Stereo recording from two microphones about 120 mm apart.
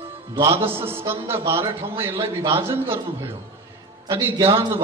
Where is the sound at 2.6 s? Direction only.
20° right (ahead or behind).